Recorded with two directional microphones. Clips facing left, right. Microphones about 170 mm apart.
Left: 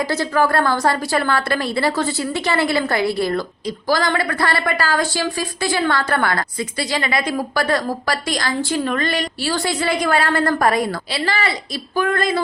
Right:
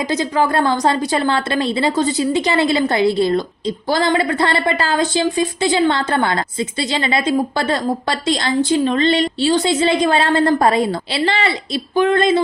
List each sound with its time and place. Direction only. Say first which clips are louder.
0.0 s a woman's voice: right 1 dB; 20° right (ahead or behind)